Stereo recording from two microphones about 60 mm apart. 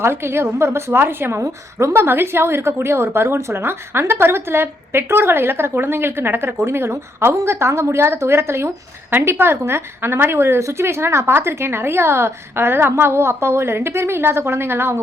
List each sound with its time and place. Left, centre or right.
0.0 s a woman's voice: right